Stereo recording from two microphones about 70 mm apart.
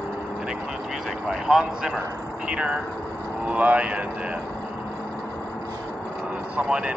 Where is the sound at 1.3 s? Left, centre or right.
Centre.